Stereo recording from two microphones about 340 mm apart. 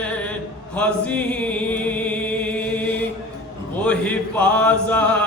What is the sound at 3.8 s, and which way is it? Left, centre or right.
Mantra, centre.